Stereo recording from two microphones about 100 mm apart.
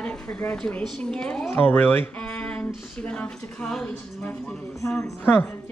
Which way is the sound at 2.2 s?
10° left (ahead or behind).